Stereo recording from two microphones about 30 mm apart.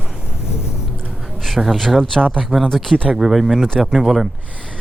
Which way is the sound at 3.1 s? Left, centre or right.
Centre.